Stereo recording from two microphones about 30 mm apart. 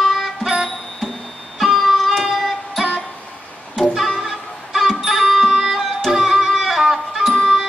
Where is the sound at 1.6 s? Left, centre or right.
Centre.